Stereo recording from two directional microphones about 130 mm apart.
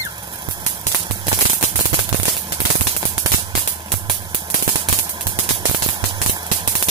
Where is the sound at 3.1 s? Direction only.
35° right (ahead or behind).